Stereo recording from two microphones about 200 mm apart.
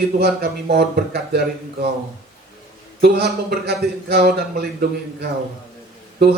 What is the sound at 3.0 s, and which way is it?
Speech, 55° right (ahead or behind).